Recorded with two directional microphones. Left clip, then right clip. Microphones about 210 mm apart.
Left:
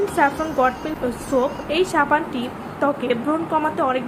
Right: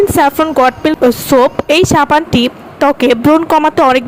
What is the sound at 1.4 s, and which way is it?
A woman's voice, 50° right (ahead or behind).